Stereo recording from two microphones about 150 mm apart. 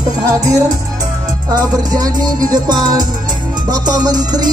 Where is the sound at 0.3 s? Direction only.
25° right (ahead or behind).